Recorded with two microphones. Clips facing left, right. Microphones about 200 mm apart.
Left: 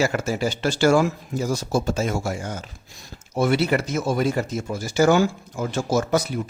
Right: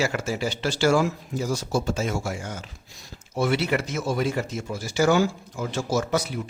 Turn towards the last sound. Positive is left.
turn(degrees=45)  # may be behind; listen again after turning